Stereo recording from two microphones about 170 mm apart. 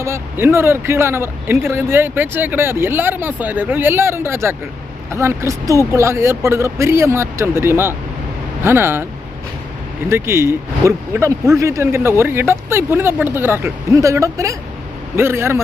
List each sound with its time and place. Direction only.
0.0 s speech: 15° right (ahead or behind)
10.1 s speech: 15° right (ahead or behind)